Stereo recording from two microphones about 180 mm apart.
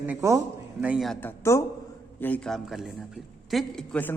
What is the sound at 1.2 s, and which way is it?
A man's voice, 15° left (ahead or behind).